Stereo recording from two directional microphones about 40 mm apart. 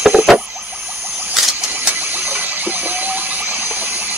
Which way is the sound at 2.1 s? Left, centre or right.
Right.